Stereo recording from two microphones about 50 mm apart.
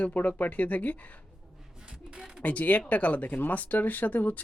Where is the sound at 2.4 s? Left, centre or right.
Left.